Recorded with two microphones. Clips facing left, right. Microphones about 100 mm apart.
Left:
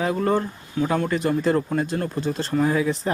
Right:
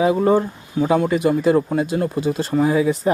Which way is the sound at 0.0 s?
10° right (ahead or behind).